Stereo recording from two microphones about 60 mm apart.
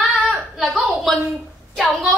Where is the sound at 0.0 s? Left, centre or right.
Centre.